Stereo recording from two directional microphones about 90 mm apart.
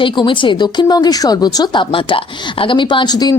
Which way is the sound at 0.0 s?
65° left (ahead or behind).